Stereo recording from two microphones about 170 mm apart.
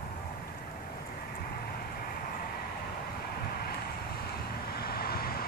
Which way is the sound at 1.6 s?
65° left (ahead or behind).